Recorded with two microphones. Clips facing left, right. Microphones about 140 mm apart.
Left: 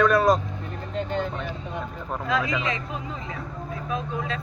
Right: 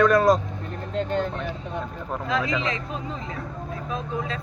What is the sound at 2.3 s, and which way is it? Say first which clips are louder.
Speech: even; 30° right (ahead or behind).